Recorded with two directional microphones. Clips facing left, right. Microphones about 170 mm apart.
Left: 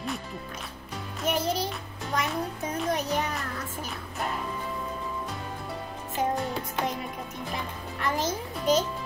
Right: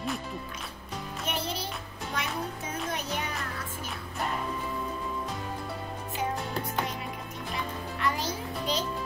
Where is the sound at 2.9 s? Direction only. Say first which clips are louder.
Left 8 dB; 40° left (ahead or behind).